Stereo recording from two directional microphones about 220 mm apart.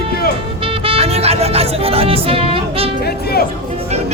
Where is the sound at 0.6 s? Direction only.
25° right (ahead or behind).